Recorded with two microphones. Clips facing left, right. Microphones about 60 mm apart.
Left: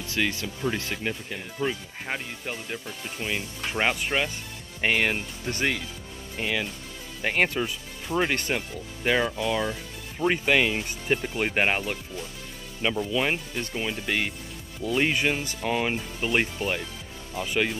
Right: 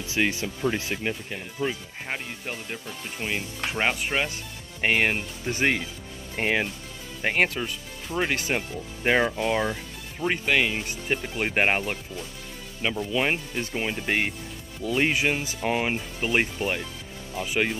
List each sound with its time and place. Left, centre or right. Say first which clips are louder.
0.0 s speech: right 2 dB; centre
4.8 s speech: right 1 dB; centre
6.3 s speech: right 4 dB; right
7.2 s speech: right 1 dB; centre
7.4 s speech: left 1 dB; centre
8.5 s speech: right 1 dB; right
10.1 s speech: left 1 dB; centre
11.5 s speech: right 3 dB; centre
13.1 s speech: right 1 dB; centre
13.7 s speech: right 2 dB; right
14.8 s speech: even; centre
15.0 s speech: right 1 dB; centre